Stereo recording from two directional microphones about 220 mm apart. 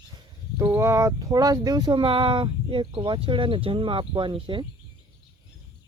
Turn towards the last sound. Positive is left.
turn(degrees=-20)  # may be behind; listen again after turning